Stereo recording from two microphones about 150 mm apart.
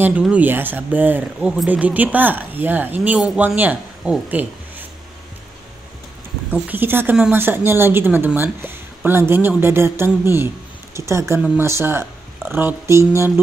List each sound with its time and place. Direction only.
0.0 s speech: 10° right (ahead or behind)
6.7 s speech: 15° right (ahead or behind)